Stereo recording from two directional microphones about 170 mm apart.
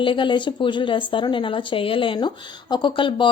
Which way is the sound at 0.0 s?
30° left (ahead or behind).